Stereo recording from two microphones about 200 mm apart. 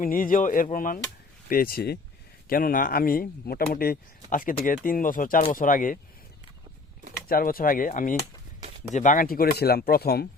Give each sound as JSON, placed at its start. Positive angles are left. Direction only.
{"t": 0.0, "sound": "speech", "side_deg": 45}
{"t": 7.3, "sound": "speech", "side_deg": 45}